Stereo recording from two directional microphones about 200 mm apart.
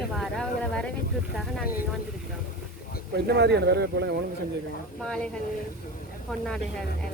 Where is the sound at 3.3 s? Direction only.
55° right (ahead or behind).